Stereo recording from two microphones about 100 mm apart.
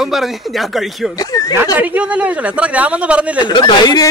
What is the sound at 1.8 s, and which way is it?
Speech, 15° right (ahead or behind).